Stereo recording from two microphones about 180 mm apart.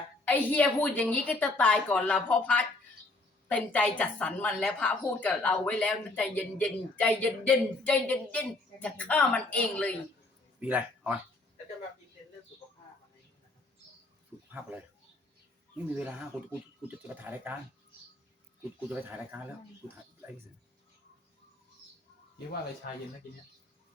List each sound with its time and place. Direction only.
0.3 s a woman's voice: 10° left (ahead or behind)
10.6 s speech: 10° right (ahead or behind)
14.5 s speech: 10° right (ahead or behind)
16.0 s speech: 10° right (ahead or behind)
18.9 s speech: 10° right (ahead or behind)
22.8 s speech: 55° left (ahead or behind)